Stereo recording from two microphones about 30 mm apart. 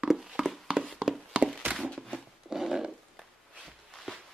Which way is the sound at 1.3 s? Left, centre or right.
Right.